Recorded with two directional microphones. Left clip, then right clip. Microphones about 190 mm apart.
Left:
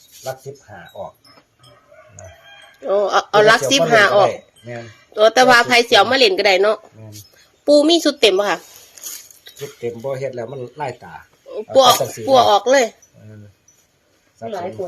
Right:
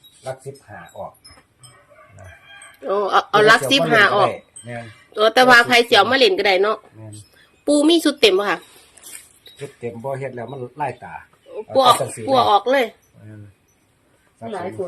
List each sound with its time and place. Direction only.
0.7 s speech: 20° left (ahead or behind)
2.8 s a woman's voice: centre (ahead or behind)
9.4 s speech: 20° left (ahead or behind)